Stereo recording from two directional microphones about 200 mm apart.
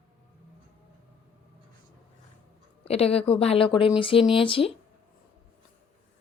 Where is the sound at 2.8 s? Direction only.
30° left (ahead or behind).